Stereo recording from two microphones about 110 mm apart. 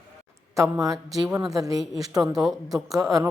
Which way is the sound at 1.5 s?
35° right (ahead or behind).